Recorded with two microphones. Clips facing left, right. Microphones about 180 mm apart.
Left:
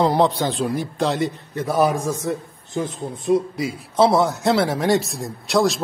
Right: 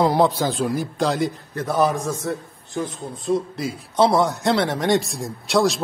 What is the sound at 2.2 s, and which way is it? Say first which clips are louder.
A man's voice: left 2 dB; 20° left (ahead or behind).